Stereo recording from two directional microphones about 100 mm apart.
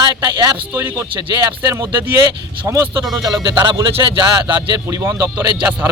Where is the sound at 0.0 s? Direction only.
45° right (ahead or behind).